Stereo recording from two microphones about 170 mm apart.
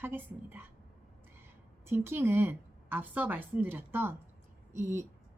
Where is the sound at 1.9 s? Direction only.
15° right (ahead or behind).